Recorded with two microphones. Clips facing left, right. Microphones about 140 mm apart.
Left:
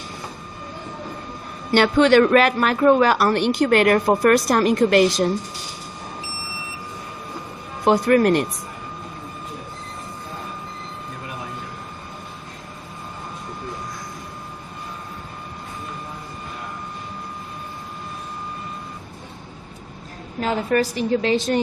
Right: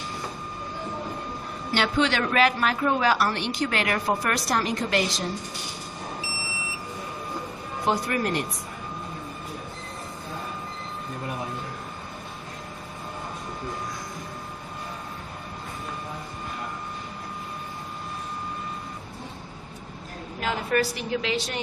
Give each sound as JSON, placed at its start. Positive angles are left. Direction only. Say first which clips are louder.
{"t": 1.7, "sound": "a woman's voice", "louder": "left 10 dB", "side_deg": 55}
{"t": 7.9, "sound": "speech", "louder": "left 10 dB", "side_deg": 60}
{"t": 20.4, "sound": "a woman's voice", "louder": "left 5 dB", "side_deg": 35}